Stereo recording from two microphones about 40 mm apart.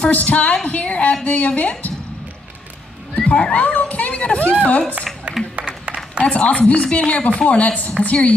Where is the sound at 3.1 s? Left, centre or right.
Left.